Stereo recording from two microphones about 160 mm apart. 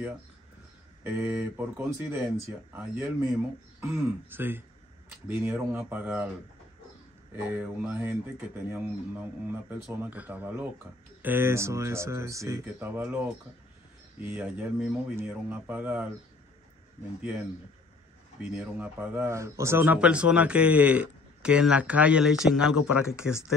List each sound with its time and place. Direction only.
1.0 s a man's voice: 10° right (ahead or behind)
7.3 s a man's voice: 10° right (ahead or behind)
17.2 s a man's voice: 10° right (ahead or behind)
18.5 s a man's voice: 10° right (ahead or behind)